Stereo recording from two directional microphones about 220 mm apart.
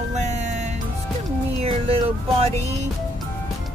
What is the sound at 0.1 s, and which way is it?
Music, 30° right (ahead or behind).